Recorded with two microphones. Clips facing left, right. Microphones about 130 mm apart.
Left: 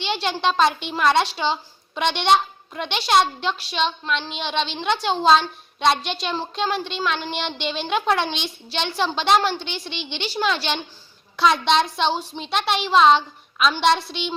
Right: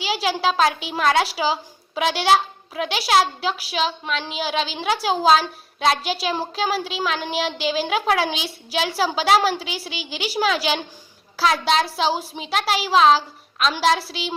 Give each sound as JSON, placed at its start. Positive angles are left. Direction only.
{"t": 0.0, "sound": "a child's voice", "side_deg": -5}